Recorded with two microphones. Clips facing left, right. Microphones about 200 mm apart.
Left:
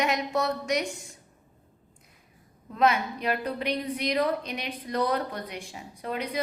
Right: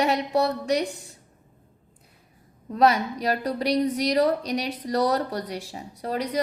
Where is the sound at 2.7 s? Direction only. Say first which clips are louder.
Right 4 dB; 40° right (ahead or behind).